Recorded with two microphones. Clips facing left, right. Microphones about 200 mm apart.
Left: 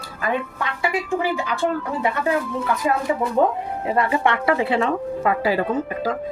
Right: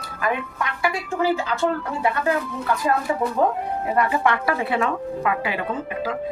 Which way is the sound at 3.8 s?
25° left (ahead or behind).